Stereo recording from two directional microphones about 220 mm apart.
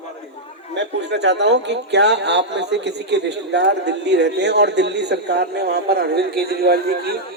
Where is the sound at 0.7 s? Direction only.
50° right (ahead or behind).